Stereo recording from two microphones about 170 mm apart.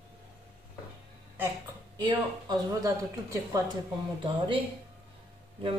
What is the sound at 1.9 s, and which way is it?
Speech, 25° right (ahead or behind).